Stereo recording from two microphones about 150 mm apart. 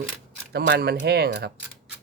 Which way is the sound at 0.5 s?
90° right.